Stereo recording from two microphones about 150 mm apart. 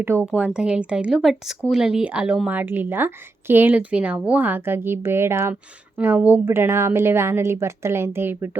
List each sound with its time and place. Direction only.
0.0 s a woman's voice: 15° right (ahead or behind)